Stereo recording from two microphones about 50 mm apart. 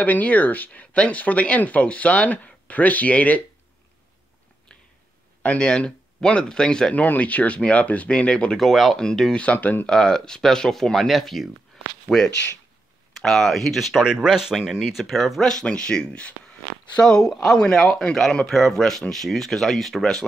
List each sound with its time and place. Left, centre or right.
0.0 s speech: left
5.4 s speech: left
5.7 s speech: centre
8.5 s speech: centre
9.3 s speech: left
9.8 s speech: centre
14.8 s speech: centre
15.4 s speech: centre
17.0 s speech: centre
17.3 s speech: centre